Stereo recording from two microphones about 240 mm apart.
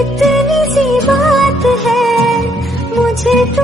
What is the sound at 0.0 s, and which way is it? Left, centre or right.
Music, centre.